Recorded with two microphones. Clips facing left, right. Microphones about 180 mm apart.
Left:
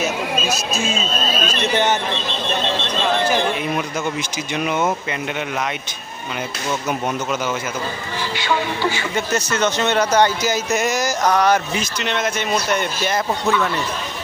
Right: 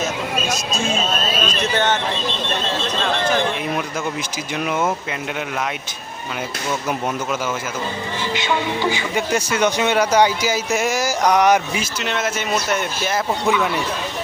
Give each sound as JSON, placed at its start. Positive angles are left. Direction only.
{"t": 0.0, "sound": "a sound", "side_deg": 5}
{"t": 1.7, "sound": "speech", "side_deg": 10}
{"t": 4.5, "sound": "speech", "side_deg": 0}
{"t": 8.4, "sound": "speech", "side_deg": -15}
{"t": 11.7, "sound": "speech", "side_deg": -5}